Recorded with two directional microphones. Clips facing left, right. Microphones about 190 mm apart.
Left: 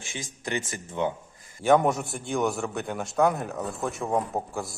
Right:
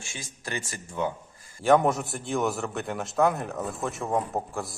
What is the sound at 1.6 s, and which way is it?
A man's voice, centre (ahead or behind).